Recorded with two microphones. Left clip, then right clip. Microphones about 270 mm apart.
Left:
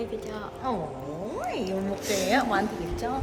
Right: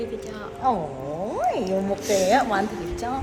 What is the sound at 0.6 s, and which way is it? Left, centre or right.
Speech, centre.